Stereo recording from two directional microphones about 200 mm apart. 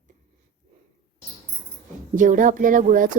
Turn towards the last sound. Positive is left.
turn(degrees=-40)  # may be behind; listen again after turning